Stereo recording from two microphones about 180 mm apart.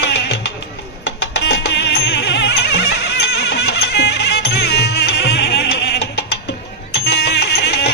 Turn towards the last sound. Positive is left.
turn(degrees=70)  # may be behind; listen again after turning